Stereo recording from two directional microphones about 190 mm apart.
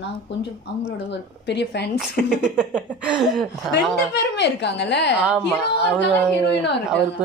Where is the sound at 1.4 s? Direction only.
65° left (ahead or behind).